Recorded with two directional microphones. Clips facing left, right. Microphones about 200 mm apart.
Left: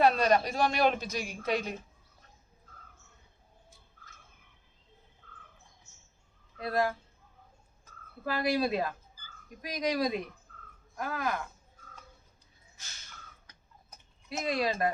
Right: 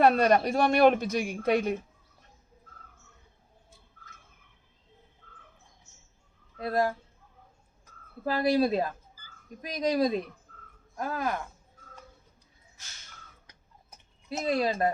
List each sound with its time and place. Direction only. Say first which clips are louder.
0.0 s a woman's voice: right 3 dB; 55° right (ahead or behind)
6.6 s speech: right 2 dB; 30° right (ahead or behind)
8.3 s speech: right 4 dB; 30° right (ahead or behind)
14.3 s speech: right 3 dB; 30° right (ahead or behind)